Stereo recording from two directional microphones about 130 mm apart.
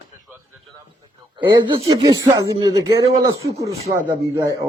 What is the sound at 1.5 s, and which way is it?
Speech, 35° right (ahead or behind).